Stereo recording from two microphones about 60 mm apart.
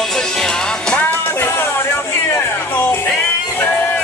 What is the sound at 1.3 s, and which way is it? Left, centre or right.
Music, left.